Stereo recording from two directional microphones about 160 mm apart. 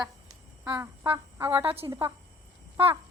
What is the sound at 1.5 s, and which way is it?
Speech, 35° right (ahead or behind).